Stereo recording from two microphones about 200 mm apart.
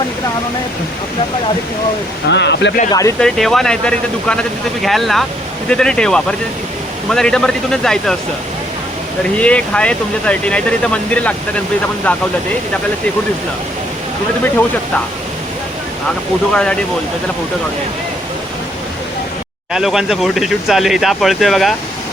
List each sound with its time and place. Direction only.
2.3 s speech: 60° left (ahead or behind)
2.9 s speech: 15° left (ahead or behind)
3.2 s speech: centre (ahead or behind)
9.4 s speech: 5° left (ahead or behind)
16.5 s speech: 5° left (ahead or behind)
19.7 s speech: centre (ahead or behind)